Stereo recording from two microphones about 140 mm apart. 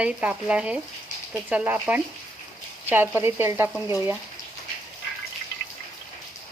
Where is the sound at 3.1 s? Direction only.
15° right (ahead or behind).